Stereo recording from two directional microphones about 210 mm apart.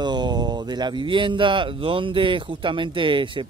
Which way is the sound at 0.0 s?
20° right (ahead or behind).